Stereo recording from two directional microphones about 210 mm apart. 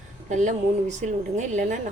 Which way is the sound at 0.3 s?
35° right (ahead or behind).